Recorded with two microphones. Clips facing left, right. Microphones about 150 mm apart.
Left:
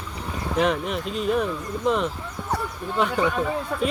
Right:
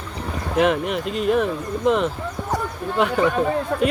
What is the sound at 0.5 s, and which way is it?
Speech, 5° right (ahead or behind).